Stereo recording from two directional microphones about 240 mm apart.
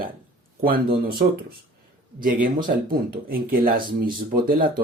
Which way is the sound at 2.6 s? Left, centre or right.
Right.